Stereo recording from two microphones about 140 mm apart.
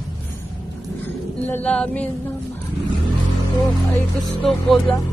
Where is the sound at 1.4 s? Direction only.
10° left (ahead or behind).